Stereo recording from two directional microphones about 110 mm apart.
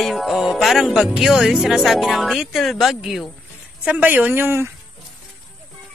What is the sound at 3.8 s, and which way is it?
Speech, 15° right (ahead or behind).